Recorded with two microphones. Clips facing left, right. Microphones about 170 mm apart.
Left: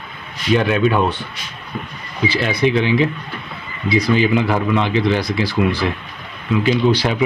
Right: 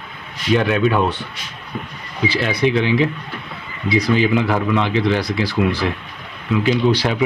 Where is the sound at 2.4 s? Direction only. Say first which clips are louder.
Left 1 dB; centre (ahead or behind).